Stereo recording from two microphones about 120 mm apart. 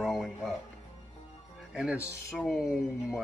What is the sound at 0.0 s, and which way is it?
Music, centre (ahead or behind).